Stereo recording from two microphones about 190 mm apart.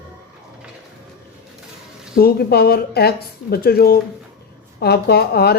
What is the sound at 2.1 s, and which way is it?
Speech, 55° left (ahead or behind).